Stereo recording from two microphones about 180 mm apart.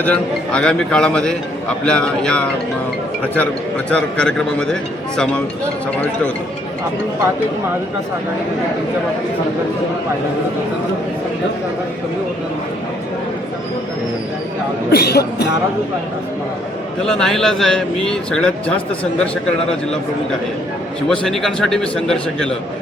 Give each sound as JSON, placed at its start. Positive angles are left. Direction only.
{"t": 0.0, "sound": "a man's voice", "side_deg": 5}
{"t": 14.9, "sound": "speech", "side_deg": 60}
{"t": 17.1, "sound": "a man's voice", "side_deg": 5}
{"t": 21.1, "sound": "a man's voice", "side_deg": 0}